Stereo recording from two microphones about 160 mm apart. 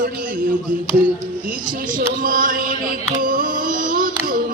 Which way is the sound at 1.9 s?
60° right (ahead or behind).